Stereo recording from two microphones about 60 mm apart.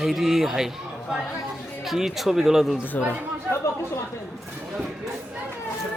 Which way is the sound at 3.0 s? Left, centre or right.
Left.